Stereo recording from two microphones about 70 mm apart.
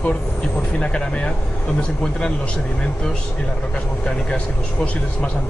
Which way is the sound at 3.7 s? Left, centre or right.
Centre.